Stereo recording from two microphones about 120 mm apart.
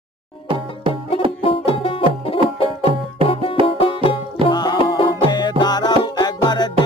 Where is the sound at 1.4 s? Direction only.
50° left (ahead or behind).